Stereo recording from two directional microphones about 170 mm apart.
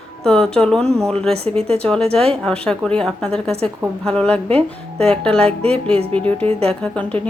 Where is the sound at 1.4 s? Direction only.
35° right (ahead or behind).